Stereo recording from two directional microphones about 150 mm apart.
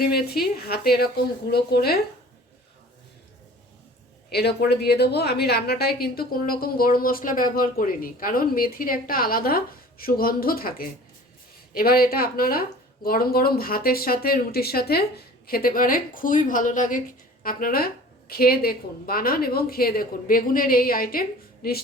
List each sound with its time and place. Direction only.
0.0 s a woman's voice: 90° left
4.3 s a woman's voice: 90° left; by 17.0 s 60° left (ahead or behind)
17.4 s a woman's voice: 75° left (ahead or behind)